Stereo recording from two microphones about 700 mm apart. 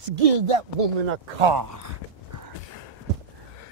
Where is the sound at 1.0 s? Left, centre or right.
Right.